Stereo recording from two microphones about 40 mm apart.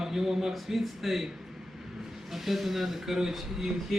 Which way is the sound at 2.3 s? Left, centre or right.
Centre.